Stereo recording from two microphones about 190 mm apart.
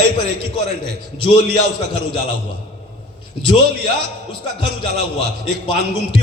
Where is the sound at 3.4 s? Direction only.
25° left (ahead or behind).